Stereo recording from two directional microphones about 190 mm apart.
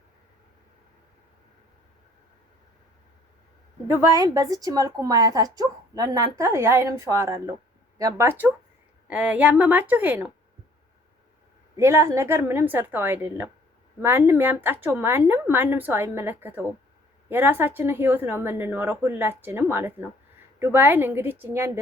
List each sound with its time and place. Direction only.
4.1 s speech: 20° right (ahead or behind)
11.8 s speech: 15° right (ahead or behind)